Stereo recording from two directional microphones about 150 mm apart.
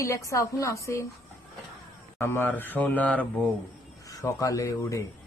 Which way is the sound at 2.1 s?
15° left (ahead or behind).